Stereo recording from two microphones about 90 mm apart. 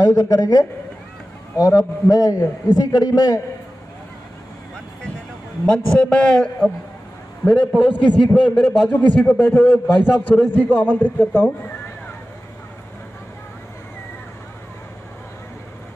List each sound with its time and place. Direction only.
0.0 s a man's voice: 40° left (ahead or behind)
5.7 s a man's voice: 10° left (ahead or behind)